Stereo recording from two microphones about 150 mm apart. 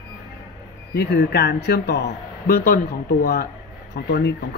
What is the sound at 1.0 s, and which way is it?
Speech, 90° left.